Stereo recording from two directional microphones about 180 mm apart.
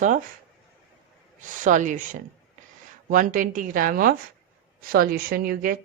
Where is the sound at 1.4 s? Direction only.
45° right (ahead or behind).